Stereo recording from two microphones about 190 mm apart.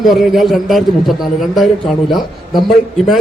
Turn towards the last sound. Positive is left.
turn(degrees=0)  # may be behind; listen again after turning